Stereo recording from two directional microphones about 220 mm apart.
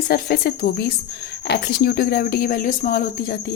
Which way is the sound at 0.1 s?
40° left (ahead or behind).